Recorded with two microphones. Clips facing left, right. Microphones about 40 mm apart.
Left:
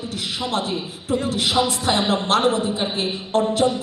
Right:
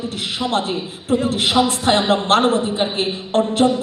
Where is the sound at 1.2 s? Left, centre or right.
Right.